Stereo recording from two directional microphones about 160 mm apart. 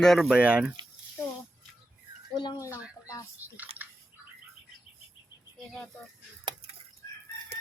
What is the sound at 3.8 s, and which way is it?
Bird, 10° right (ahead or behind).